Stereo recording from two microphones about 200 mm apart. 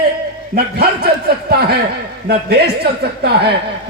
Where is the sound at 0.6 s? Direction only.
50° right (ahead or behind).